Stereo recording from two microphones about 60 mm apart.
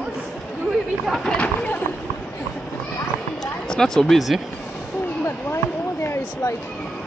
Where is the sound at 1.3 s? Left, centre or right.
Left.